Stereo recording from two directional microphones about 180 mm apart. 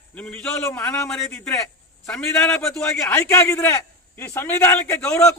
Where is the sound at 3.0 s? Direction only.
15° left (ahead or behind).